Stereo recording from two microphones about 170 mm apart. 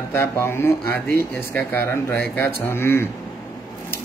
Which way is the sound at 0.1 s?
15° left (ahead or behind).